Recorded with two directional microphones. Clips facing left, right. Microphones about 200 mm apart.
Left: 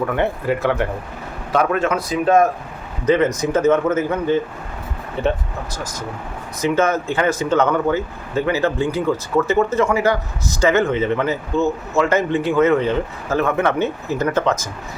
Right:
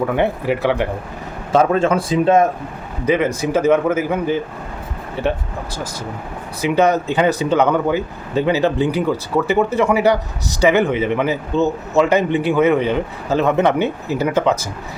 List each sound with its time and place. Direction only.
0.1 s speech: 15° right (ahead or behind)
1.5 s speech: 30° right (ahead or behind)
3.5 s speech: 10° right (ahead or behind)
6.6 s speech: 15° right (ahead or behind)